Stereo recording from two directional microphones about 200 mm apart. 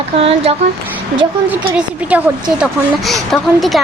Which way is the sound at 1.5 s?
5° right (ahead or behind).